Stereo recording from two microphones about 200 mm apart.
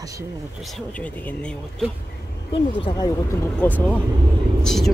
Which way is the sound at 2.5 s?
25° left (ahead or behind).